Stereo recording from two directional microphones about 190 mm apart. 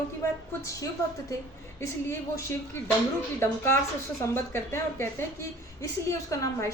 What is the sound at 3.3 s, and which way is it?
A woman's voice, 10° left (ahead or behind).